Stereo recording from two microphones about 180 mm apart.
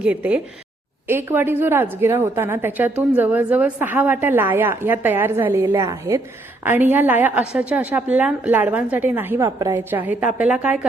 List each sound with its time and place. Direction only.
0.0 s a woman's voice: 5° right (ahead or behind)